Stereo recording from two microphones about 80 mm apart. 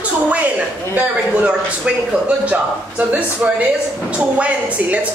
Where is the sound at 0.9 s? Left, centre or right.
Centre.